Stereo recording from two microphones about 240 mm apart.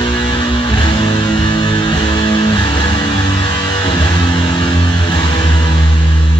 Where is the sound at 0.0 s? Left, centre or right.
Centre.